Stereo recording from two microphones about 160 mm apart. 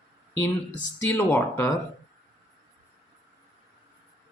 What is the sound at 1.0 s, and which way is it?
Speech, 15° left (ahead or behind).